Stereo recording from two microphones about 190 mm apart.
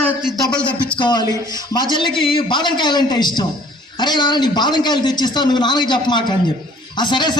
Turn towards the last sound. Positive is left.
turn(degrees=25)  # may be behind; listen again after turning